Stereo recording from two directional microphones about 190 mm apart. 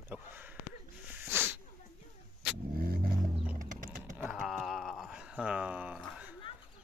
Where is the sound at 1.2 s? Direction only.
10° right (ahead or behind).